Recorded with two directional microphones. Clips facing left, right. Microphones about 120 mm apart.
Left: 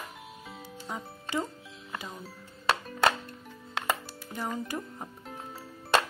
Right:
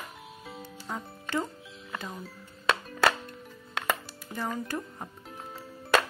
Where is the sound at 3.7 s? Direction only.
25° left (ahead or behind).